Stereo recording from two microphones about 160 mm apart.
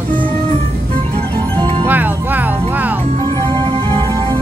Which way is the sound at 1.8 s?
10° right (ahead or behind).